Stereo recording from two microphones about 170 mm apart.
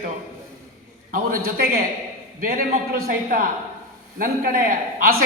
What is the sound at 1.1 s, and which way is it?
A man's voice, 55° right (ahead or behind).